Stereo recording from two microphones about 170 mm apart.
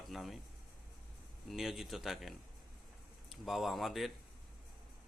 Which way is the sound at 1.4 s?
Centre (ahead or behind).